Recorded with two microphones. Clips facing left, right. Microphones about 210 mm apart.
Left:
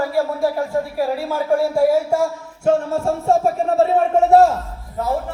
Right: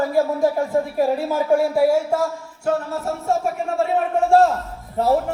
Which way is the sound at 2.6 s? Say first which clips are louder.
Left 5 dB; 30° left (ahead or behind).